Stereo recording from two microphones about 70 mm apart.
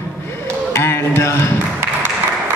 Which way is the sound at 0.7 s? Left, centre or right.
Left.